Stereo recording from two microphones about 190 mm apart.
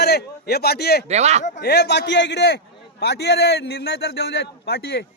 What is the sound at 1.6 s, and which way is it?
A man's voice, 60° left (ahead or behind).